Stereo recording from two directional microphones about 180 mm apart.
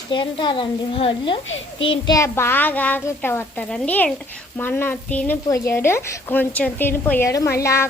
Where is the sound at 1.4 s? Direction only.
90° left.